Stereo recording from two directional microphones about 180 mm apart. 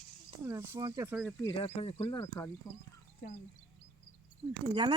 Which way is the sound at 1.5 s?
30° left (ahead or behind).